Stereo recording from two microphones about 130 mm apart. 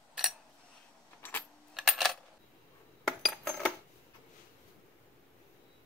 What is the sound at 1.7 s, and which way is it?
Coin, centre (ahead or behind).